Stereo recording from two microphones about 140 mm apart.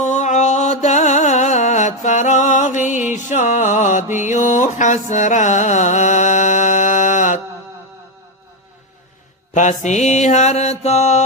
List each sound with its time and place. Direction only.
0.0 s music: 55° left (ahead or behind)
9.6 s mantra: 60° left (ahead or behind)